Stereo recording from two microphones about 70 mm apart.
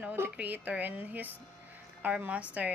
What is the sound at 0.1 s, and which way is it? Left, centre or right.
A woman's voice, right.